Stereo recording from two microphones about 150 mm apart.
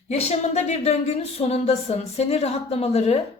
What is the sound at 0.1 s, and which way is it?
A woman's voice, 45° left (ahead or behind).